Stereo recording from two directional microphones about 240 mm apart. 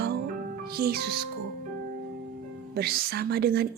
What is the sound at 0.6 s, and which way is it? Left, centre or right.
Speech, right.